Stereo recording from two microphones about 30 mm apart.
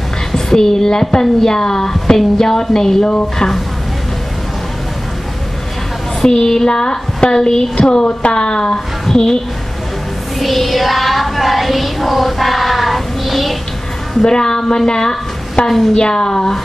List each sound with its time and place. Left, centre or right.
0.3 s a woman's voice: centre
3.0 s a woman's voice: left
6.2 s a woman's voice: centre
7.8 s a woman's voice: left
8.7 s a woman's voice: centre
10.4 s child singing: centre
14.2 s a woman's voice: left